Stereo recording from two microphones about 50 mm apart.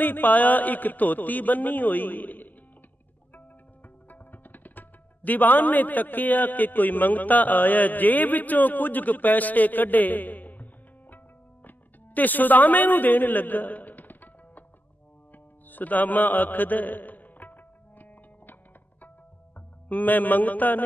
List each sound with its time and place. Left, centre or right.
0.0 s a man's voice: left
4.1 s speech: left
11.6 s music: left
19.9 s a man's voice: left